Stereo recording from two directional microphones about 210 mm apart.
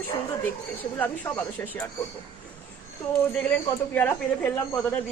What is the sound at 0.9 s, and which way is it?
Speech, 10° left (ahead or behind).